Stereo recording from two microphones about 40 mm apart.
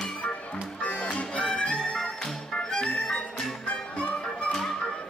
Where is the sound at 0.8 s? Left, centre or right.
Left.